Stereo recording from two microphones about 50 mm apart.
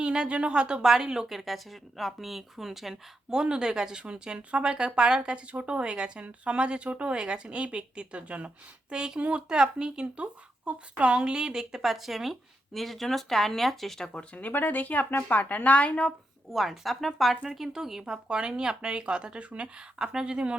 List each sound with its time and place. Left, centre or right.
0.0 s a woman's voice: centre
14.3 s a woman's voice: left
16.5 s a woman's voice: centre